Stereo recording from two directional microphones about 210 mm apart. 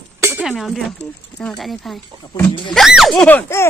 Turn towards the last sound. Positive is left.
turn(degrees=10)  # may be behind; listen again after turning